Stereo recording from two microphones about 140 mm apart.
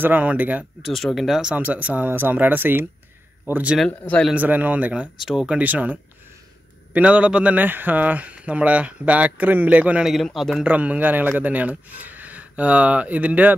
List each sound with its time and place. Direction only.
0.0 s speech: 10° right (ahead or behind)
0.8 s speech: centre (ahead or behind)
3.7 s speech: 5° left (ahead or behind)
4.3 s speech: 10° right (ahead or behind)
10.7 s speech: 10° right (ahead or behind)